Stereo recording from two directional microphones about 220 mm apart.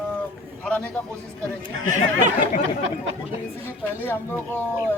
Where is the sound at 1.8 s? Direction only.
35° right (ahead or behind).